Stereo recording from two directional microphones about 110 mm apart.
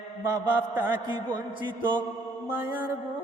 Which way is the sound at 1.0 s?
45° right (ahead or behind).